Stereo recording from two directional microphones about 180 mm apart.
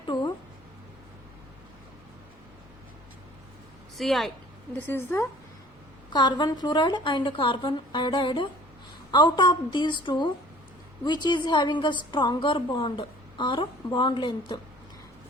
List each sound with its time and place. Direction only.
0.1 s music: 20° left (ahead or behind)
3.9 s a woman's voice: centre (ahead or behind)
4.9 s a woman's voice: 15° left (ahead or behind)
6.1 s a woman's voice: 25° left (ahead or behind)